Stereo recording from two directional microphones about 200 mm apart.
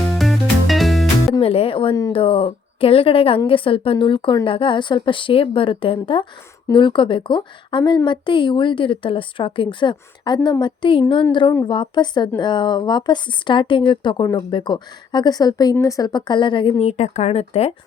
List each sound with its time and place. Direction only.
0.0 s music: centre (ahead or behind)
1.3 s a woman's voice: 30° left (ahead or behind)